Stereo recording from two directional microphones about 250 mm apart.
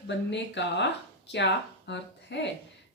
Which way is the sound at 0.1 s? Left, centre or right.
Left.